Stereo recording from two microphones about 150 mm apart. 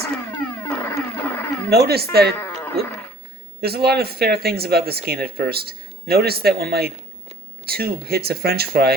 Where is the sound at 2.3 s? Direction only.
15° left (ahead or behind).